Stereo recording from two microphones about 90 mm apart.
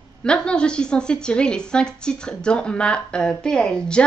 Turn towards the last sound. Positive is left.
turn(degrees=10)  # may be behind; listen again after turning